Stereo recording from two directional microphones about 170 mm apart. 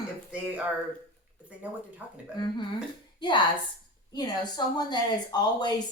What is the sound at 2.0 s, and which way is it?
Speech, 10° right (ahead or behind).